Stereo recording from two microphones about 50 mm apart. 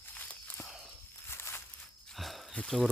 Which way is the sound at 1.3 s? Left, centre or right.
Left.